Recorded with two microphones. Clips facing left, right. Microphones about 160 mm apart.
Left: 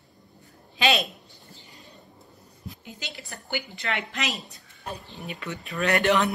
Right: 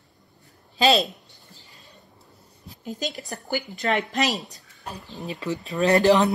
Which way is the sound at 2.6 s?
40° right (ahead or behind).